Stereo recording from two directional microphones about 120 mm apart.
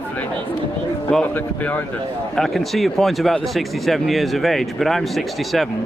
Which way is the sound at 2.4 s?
Centre (ahead or behind).